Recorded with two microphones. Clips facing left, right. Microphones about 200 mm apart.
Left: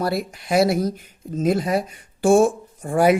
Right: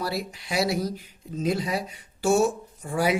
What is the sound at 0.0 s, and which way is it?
Speech, 50° left (ahead or behind).